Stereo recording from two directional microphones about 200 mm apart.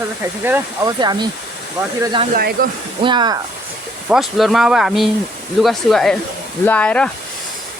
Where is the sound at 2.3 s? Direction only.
45° right (ahead or behind).